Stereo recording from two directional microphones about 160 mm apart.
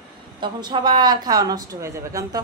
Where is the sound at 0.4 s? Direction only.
30° right (ahead or behind).